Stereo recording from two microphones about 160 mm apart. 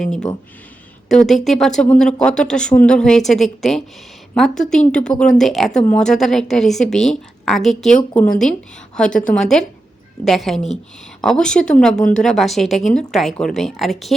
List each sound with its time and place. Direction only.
0.0 s speech: 5° left (ahead or behind)